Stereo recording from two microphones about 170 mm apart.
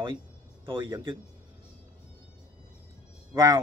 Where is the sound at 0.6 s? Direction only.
30° right (ahead or behind).